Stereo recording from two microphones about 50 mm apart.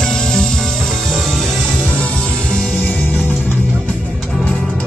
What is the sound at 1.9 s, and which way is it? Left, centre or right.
Music, left.